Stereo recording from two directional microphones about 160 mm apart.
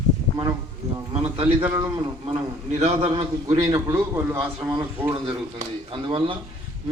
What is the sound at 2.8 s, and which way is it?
Speech, 40° right (ahead or behind).